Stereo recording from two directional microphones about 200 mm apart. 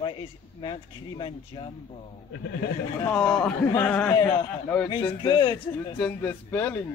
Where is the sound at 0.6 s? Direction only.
25° left (ahead or behind).